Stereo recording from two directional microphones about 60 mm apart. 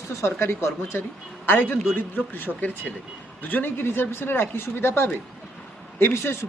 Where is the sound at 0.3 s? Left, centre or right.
Left.